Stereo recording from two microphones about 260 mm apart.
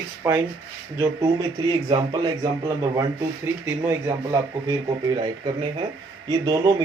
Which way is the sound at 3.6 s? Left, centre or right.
Centre.